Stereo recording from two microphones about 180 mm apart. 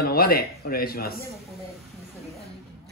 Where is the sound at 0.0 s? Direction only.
55° left (ahead or behind).